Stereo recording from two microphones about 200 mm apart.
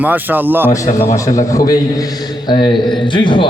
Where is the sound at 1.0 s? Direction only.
15° left (ahead or behind).